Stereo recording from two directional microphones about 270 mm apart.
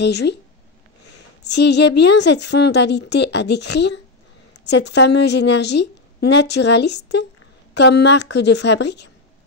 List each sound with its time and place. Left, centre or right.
0.0 s a woman's voice: left